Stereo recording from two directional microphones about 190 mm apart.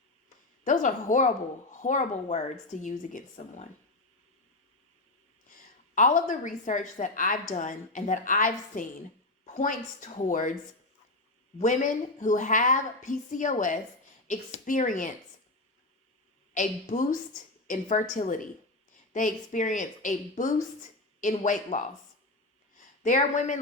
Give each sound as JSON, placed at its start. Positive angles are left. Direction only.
{"t": 0.6, "sound": "a woman's voice", "side_deg": 40}
{"t": 5.9, "sound": "a woman's voice", "side_deg": 40}
{"t": 11.5, "sound": "a woman's voice", "side_deg": 40}
{"t": 16.6, "sound": "a woman's voice", "side_deg": 45}
{"t": 23.0, "sound": "a woman's voice", "side_deg": 40}